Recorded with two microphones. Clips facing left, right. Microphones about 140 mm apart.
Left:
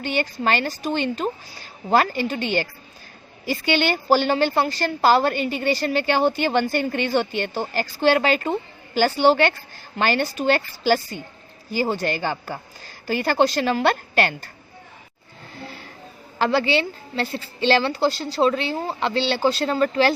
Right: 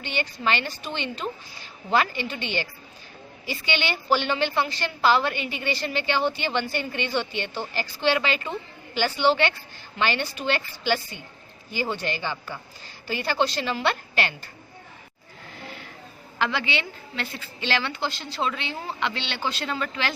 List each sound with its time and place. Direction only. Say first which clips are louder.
0.0 s a woman's voice: left 5 dB; 45° left (ahead or behind)
15.5 s vehicle: left 3 dB; 35° left (ahead or behind)
16.4 s a woman's voice: left 7 dB; 35° left (ahead or behind)